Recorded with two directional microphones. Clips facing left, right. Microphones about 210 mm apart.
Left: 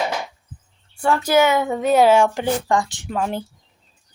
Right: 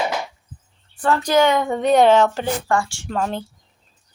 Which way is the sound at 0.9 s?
10° left (ahead or behind).